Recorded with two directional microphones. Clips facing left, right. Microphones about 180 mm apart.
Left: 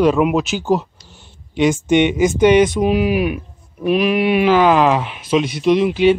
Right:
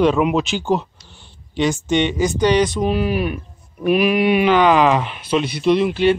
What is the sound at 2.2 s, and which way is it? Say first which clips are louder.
Speech: left 4 dB; 20° left (ahead or behind).